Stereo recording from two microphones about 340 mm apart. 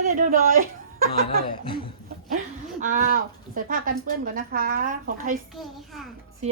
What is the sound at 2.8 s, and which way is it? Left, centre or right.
Speech, right.